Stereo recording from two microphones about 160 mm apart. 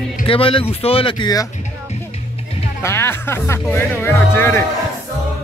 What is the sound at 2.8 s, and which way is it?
Speech, 15° left (ahead or behind).